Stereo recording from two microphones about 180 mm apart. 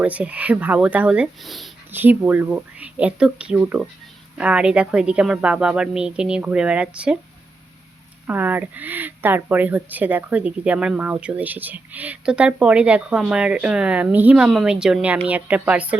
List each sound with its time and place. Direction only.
0.0 s speech: 10° right (ahead or behind)
1.9 s speech: 10° right (ahead or behind)
8.3 s speech: 10° right (ahead or behind)